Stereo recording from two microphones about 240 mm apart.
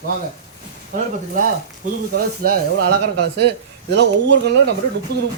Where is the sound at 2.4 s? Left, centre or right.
Right.